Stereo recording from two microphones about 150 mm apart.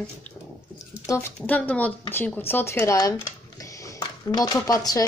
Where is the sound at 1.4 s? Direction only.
10° left (ahead or behind).